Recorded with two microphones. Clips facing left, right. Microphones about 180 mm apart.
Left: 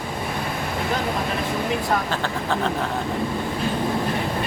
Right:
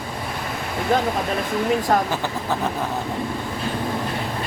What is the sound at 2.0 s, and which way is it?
Speech, 10° right (ahead or behind).